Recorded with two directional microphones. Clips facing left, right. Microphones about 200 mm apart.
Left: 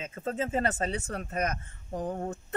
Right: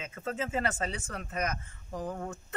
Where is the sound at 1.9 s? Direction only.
30° left (ahead or behind).